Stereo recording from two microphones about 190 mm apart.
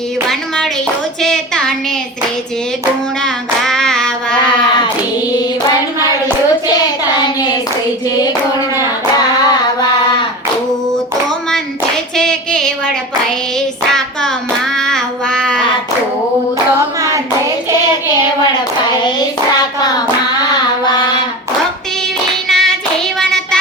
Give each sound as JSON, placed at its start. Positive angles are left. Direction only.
{"t": 0.3, "sound": "a sound", "side_deg": 5}
{"t": 3.2, "sound": "hands", "side_deg": 5}
{"t": 8.2, "sound": "hands", "side_deg": 20}
{"t": 12.1, "sound": "female singing", "side_deg": 5}
{"t": 14.8, "sound": "child singing", "side_deg": 5}
{"t": 20.4, "sound": "child singing", "side_deg": 20}
{"t": 22.4, "sound": "hands", "side_deg": 0}